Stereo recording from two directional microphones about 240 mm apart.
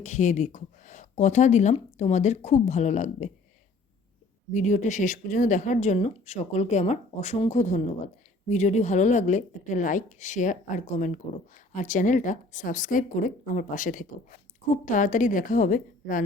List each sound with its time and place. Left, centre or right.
0.0 s a woman's voice: left
4.5 s a woman's voice: left